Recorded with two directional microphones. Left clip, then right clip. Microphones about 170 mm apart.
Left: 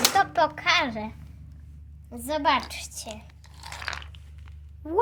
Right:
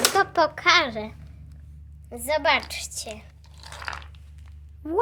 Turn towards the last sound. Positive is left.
turn(degrees=-15)  # may be behind; listen again after turning